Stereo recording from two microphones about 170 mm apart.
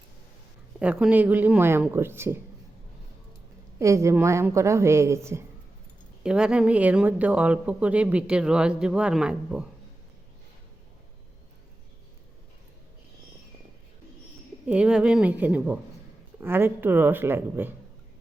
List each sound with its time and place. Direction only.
0.8 s speech: 5° right (ahead or behind)
3.8 s speech: 15° right (ahead or behind)
6.2 s speech: 5° right (ahead or behind)
14.7 s speech: 5° right (ahead or behind)